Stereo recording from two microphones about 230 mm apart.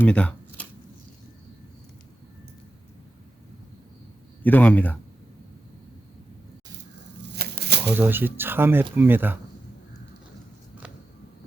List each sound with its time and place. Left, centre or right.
0.0 s speech: centre
4.4 s speech: centre
7.2 s shuffling cards: right
7.9 s speech: centre